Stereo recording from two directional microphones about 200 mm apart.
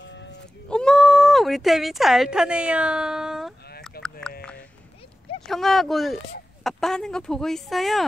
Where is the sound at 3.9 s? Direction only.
50° left (ahead or behind).